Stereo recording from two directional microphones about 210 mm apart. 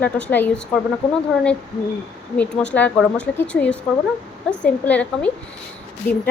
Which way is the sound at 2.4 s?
5° left (ahead or behind).